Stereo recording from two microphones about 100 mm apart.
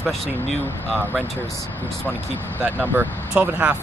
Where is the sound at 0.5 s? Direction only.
20° left (ahead or behind).